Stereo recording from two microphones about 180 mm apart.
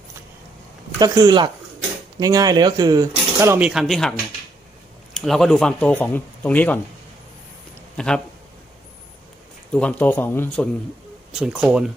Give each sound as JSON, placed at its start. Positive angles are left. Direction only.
{"t": 0.9, "sound": "speech", "side_deg": -20}
{"t": 5.1, "sound": "speech", "side_deg": 0}
{"t": 7.9, "sound": "speech", "side_deg": 5}
{"t": 9.7, "sound": "speech", "side_deg": 10}
{"t": 11.3, "sound": "speech", "side_deg": -5}